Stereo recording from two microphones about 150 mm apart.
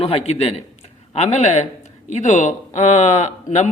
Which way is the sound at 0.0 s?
40° left (ahead or behind).